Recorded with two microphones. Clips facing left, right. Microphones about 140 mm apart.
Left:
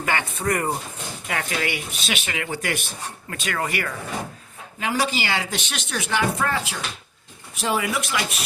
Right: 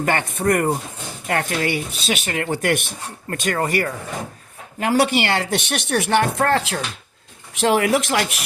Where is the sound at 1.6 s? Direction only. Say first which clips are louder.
Right 5 dB; 35° right (ahead or behind); by 2.8 s 55° right (ahead or behind).